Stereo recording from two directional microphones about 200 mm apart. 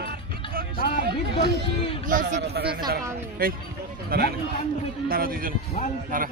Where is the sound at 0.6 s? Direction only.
45° right (ahead or behind).